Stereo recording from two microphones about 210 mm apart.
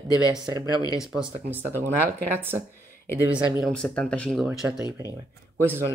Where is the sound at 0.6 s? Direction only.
20° left (ahead or behind).